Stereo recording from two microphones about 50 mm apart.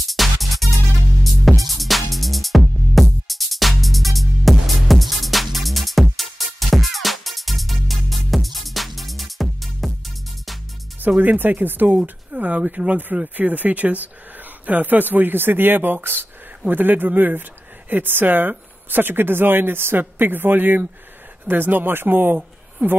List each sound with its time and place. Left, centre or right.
0.0 s music: centre
11.0 s speech: right
12.3 s speech: right